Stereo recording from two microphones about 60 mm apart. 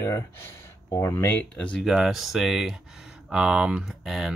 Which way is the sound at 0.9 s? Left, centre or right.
Left.